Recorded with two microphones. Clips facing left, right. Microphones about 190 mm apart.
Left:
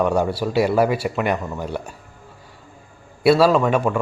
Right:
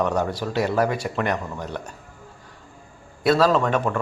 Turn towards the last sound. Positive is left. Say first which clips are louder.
# left 3 dB
turn(degrees=10)  # may be behind; listen again after turning